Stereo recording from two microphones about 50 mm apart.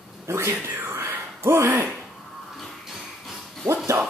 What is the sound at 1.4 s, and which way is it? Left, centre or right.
Speech, right.